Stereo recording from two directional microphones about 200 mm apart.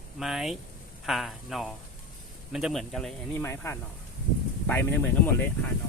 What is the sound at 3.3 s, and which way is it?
Speech, 10° left (ahead or behind).